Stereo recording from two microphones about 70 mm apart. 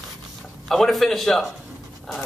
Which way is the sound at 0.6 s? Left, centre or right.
Centre.